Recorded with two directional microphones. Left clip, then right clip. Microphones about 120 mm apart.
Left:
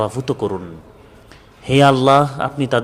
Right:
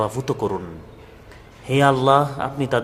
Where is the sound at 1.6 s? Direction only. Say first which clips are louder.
Left 4 dB; 40° left (ahead or behind).